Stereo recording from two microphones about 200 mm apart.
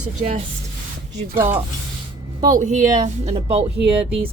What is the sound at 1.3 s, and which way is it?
Speech, 10° right (ahead or behind).